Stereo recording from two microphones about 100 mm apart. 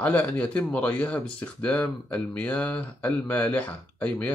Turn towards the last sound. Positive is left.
turn(degrees=15)  # may be behind; listen again after turning